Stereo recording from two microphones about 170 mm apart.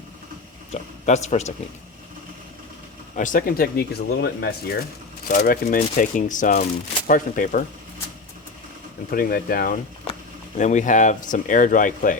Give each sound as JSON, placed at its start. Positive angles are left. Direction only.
{"t": 0.7, "sound": "a man's voice", "side_deg": 40}
{"t": 3.2, "sound": "speech", "side_deg": 50}
{"t": 5.3, "sound": "speech", "side_deg": 50}
{"t": 9.0, "sound": "speech", "side_deg": 60}
{"t": 10.6, "sound": "speech", "side_deg": 45}